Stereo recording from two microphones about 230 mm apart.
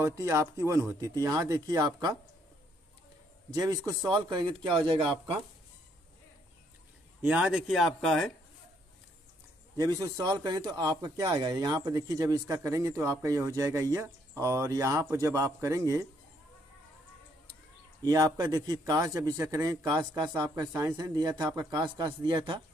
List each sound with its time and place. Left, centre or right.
0.0 s speech: centre
3.5 s a man's voice: centre
7.2 s speech: centre
9.8 s speech: centre
18.0 s speech: centre